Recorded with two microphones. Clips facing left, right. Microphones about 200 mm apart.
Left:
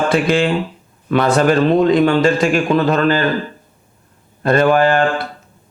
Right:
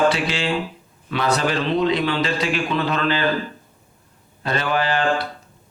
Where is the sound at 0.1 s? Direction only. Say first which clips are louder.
Left 8 dB; 50° left (ahead or behind).